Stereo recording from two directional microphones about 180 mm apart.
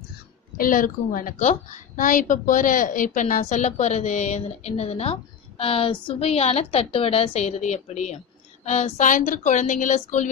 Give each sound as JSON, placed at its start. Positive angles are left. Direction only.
{"t": 0.6, "sound": "a woman's voice", "side_deg": 50}